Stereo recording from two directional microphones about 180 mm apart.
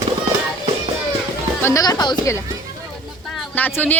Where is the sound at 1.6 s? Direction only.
20° left (ahead or behind).